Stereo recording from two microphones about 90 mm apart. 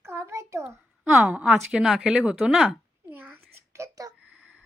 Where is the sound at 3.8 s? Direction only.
40° right (ahead or behind).